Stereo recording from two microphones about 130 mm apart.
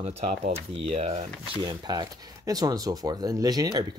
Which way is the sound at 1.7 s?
30° right (ahead or behind).